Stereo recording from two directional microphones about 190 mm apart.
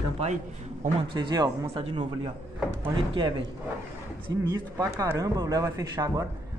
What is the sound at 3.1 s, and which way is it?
A man's voice, 25° right (ahead or behind).